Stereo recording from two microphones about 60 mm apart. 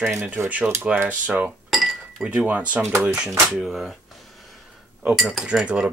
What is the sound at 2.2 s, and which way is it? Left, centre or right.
Speech, right.